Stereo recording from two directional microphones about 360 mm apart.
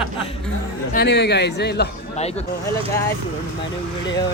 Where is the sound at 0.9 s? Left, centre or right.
Left.